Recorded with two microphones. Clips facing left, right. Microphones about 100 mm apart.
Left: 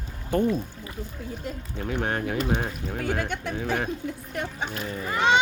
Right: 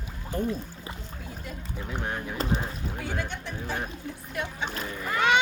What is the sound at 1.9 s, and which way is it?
Speech, 70° left (ahead or behind).